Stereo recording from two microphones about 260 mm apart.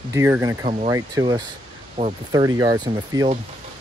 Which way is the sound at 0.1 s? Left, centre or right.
Centre.